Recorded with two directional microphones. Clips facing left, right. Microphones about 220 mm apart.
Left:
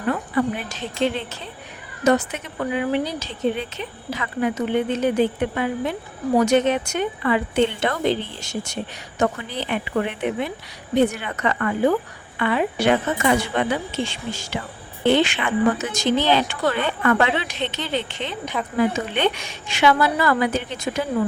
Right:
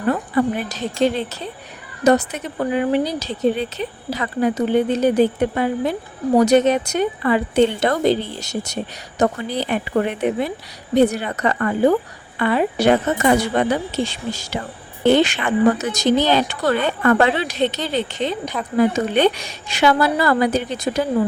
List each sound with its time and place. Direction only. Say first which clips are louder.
0.1 s speech: right 3 dB; 40° right (ahead or behind)